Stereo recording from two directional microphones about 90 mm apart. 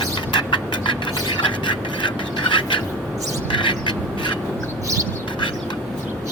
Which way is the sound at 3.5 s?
65° left (ahead or behind).